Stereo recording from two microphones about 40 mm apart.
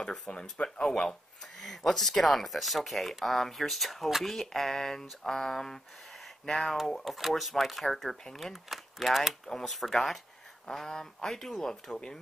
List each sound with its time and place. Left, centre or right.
0.3 s speech: left
0.8 s speech: centre
8.6 s speech: centre
11.9 s speech: left